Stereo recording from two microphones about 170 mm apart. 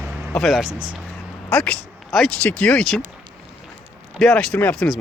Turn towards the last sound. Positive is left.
turn(degrees=0)  # may be behind; listen again after turning